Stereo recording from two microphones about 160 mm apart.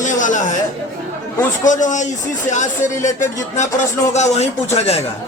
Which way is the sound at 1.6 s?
50° left (ahead or behind).